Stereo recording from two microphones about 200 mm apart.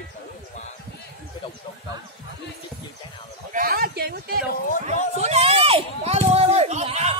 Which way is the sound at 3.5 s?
50° right (ahead or behind).